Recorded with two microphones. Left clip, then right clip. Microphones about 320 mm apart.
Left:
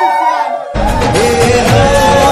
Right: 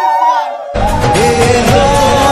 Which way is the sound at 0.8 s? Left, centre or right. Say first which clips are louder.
Right 1 dB; centre.